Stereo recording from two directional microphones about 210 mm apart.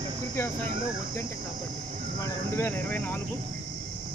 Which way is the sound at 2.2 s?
10° left (ahead or behind).